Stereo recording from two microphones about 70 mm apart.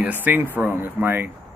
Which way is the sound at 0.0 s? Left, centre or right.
Right.